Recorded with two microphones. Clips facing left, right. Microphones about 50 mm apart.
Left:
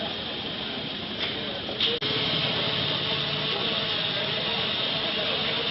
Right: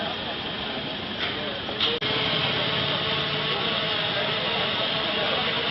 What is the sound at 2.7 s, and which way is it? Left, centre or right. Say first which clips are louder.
Vehicle: right 2 dB; right.